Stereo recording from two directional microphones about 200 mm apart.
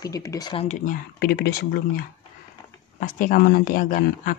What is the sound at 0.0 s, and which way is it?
Speech, 15° left (ahead or behind).